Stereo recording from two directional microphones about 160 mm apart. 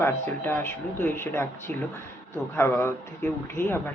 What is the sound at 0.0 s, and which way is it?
Speech, 15° left (ahead or behind).